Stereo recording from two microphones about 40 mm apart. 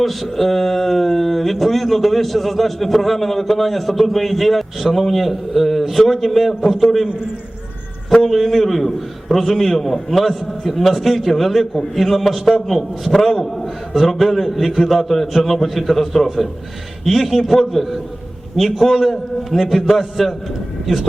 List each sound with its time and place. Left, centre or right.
0.0 s speech: centre
8.2 s speech: centre